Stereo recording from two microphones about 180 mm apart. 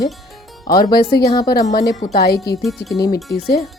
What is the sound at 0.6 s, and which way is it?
A woman's voice, 55° left (ahead or behind).